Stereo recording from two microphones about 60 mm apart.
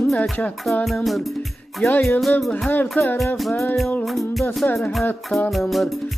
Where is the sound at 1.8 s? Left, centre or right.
Left.